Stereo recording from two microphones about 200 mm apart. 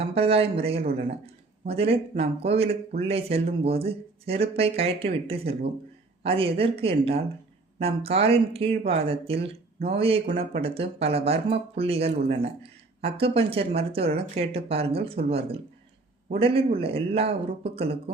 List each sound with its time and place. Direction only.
0.0 s speech: 30° right (ahead or behind)